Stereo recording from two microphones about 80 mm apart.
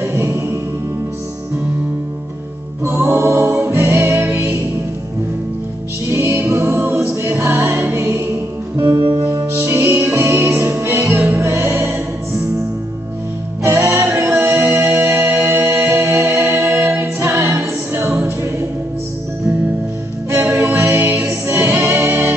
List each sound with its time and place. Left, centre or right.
0.0 s music: right
2.8 s music: right
6.0 s music: right
6.8 s a capella: centre
7.2 s music: right
13.7 s music: right
20.3 s music: right